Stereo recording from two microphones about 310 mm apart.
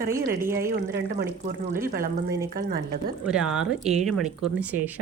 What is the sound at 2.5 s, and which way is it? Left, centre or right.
Speech, right.